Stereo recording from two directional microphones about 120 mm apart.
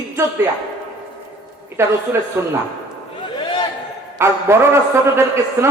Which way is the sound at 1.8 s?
20° right (ahead or behind).